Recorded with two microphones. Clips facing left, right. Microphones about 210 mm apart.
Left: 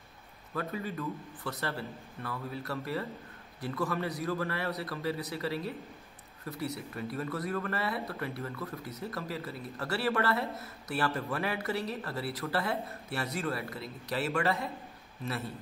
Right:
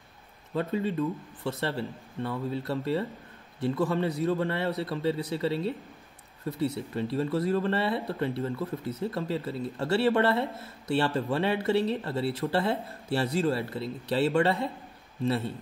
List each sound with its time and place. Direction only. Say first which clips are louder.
0.6 s speech: right 8 dB; 25° right (ahead or behind)